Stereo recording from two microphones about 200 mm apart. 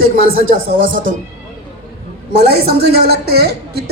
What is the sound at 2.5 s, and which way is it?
A man's voice, 55° right (ahead or behind).